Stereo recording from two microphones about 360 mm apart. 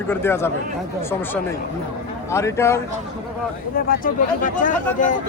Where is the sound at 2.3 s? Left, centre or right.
Centre.